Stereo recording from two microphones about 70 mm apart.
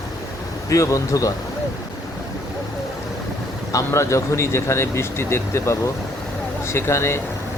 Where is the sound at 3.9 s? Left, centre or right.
Left.